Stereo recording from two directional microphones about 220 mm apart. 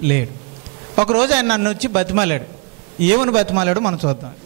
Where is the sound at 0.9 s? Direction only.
25° right (ahead or behind).